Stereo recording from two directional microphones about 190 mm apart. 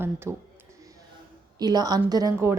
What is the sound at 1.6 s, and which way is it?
Speech, 20° right (ahead or behind).